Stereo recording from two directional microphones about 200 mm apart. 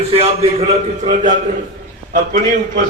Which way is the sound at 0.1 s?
30° right (ahead or behind).